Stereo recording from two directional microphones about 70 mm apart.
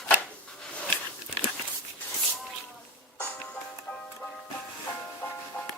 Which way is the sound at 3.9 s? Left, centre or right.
Centre.